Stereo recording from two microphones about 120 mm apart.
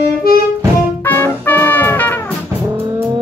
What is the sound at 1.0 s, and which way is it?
Music, 15° left (ahead or behind).